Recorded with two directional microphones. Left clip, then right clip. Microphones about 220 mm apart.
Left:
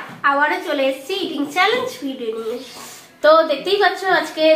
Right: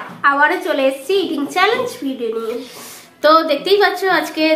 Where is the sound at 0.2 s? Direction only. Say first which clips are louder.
Right 3 dB; 55° right (ahead or behind).